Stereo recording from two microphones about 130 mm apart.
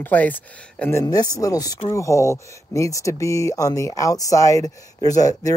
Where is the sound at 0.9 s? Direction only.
30° left (ahead or behind).